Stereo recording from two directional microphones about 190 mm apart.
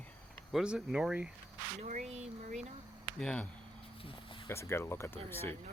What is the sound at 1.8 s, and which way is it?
Speech, 40° right (ahead or behind).